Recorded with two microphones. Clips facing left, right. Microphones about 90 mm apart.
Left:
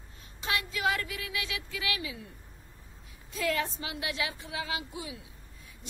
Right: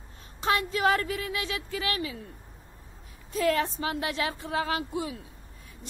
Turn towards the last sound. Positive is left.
turn(degrees=-45)  # may be behind; listen again after turning